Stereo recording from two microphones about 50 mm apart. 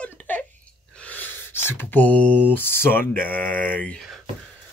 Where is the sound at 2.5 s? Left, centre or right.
Left.